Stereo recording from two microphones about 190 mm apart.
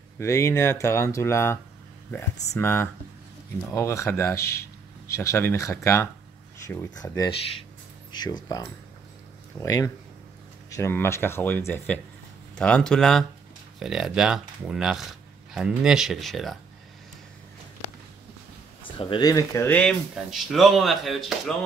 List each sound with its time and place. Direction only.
0.2 s speech: 15° left (ahead or behind)
9.6 s speech: 15° left (ahead or behind)
18.9 s speech: 25° left (ahead or behind); by 21.5 s centre (ahead or behind)